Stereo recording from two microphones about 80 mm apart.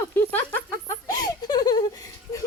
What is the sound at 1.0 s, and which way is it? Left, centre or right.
Giggle, left.